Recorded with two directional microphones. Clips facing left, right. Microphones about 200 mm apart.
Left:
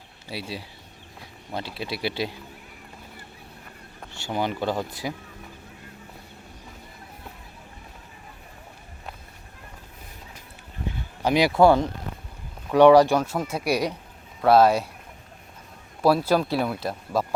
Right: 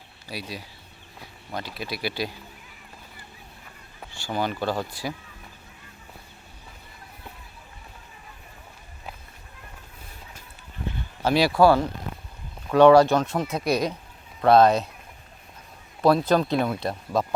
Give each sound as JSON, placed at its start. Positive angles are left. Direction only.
{"t": 0.3, "sound": "speech", "side_deg": 25}
{"t": 4.1, "sound": "speech", "side_deg": 20}
{"t": 11.2, "sound": "speech", "side_deg": 15}
{"t": 16.0, "sound": "speech", "side_deg": 5}